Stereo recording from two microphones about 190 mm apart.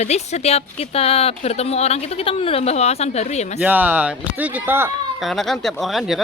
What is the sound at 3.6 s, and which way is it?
Speech, 10° right (ahead or behind).